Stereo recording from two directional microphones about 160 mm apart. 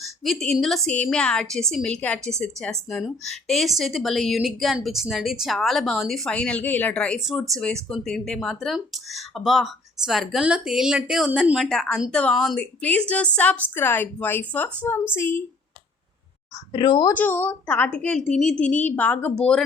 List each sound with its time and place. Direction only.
0.0 s a woman's voice: centre (ahead or behind)
16.7 s speech: 30° left (ahead or behind)
17.2 s a woman's voice: 10° left (ahead or behind)